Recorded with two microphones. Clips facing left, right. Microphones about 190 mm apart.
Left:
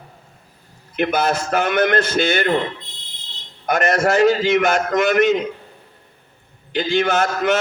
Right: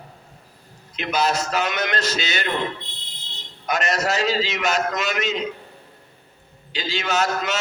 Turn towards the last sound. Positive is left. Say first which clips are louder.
# left 5 dB
turn(degrees=55)  # may be behind; listen again after turning